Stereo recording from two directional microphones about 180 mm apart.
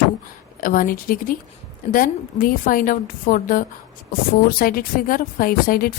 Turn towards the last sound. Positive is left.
turn(degrees=55)  # may be behind; listen again after turning